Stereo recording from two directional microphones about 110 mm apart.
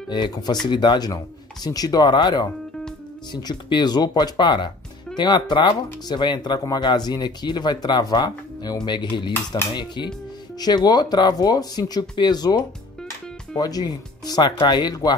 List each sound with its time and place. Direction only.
0.1 s speech: 45° left (ahead or behind)